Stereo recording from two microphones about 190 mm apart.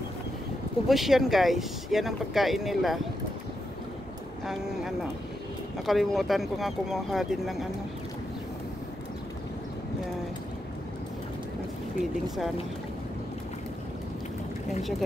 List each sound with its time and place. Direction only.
0.8 s speech: centre (ahead or behind)
4.5 s speech: centre (ahead or behind)
14.8 s speech: centre (ahead or behind)